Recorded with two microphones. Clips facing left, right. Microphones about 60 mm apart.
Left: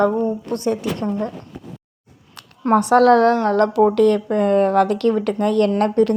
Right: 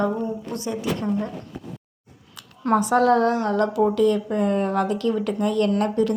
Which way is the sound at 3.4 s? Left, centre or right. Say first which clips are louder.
Left 5 dB; left.